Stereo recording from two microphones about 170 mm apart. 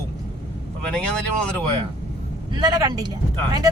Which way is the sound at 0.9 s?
5° left (ahead or behind).